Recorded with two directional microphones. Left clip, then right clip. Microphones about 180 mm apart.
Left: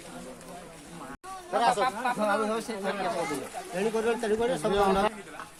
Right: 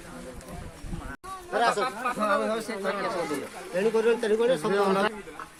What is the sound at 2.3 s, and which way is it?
Speech, 15° left (ahead or behind).